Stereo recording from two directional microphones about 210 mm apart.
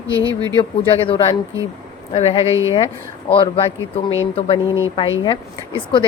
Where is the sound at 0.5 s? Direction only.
25° left (ahead or behind).